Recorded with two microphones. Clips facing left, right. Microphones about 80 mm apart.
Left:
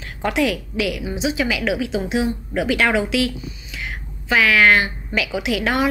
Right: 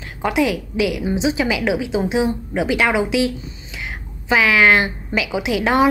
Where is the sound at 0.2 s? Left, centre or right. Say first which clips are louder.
Right 2 dB; centre.